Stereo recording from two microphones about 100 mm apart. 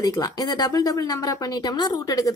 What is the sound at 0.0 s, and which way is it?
A woman's voice, 40° left (ahead or behind).